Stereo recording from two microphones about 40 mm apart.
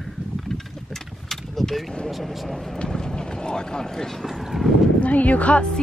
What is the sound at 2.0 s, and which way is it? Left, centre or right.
Speech, centre.